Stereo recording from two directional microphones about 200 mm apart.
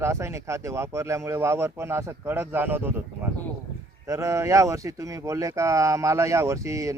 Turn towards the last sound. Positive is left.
turn(degrees=-15)  # may be behind; listen again after turning